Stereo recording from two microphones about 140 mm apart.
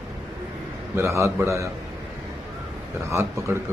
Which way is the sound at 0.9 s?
20° right (ahead or behind).